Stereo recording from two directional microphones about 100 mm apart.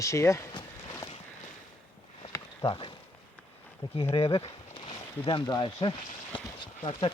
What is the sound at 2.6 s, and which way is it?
Speech, 55° left (ahead or behind).